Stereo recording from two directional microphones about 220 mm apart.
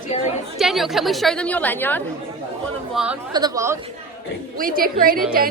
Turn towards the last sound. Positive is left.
turn(degrees=-40)  # may be behind; listen again after turning